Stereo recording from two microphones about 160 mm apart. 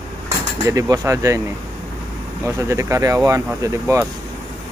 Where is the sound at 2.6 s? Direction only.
20° right (ahead or behind).